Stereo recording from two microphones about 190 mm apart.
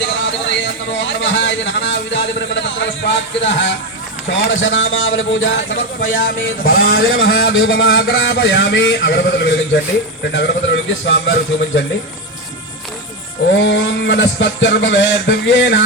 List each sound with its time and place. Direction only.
0.9 s speech: 70° left (ahead or behind)
4.4 s a man's voice: 80° left
6.1 s a man's voice: 50° left (ahead or behind); by 11.9 s 70° left (ahead or behind)
13.5 s speech: 70° left (ahead or behind)